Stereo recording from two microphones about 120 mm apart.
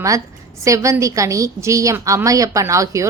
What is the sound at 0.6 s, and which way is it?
A woman's voice, 25° right (ahead or behind).